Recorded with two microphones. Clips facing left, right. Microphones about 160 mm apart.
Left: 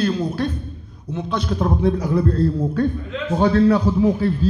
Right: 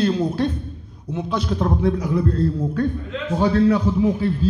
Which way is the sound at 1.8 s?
30° left (ahead or behind).